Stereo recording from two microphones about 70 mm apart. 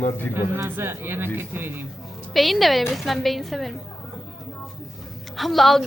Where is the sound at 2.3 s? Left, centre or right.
Centre.